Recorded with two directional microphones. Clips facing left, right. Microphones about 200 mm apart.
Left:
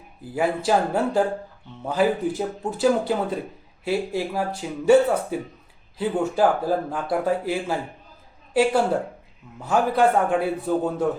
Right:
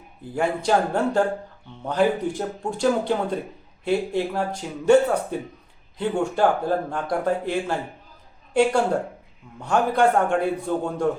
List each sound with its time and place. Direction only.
0.3 s speech: 5° left (ahead or behind)
9.6 s speech: 5° left (ahead or behind)